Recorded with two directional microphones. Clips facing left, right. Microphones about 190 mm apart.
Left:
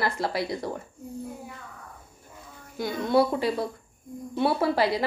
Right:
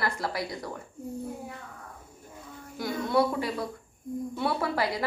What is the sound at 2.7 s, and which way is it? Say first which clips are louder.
A woman's voice: left 3 dB; 25° left (ahead or behind).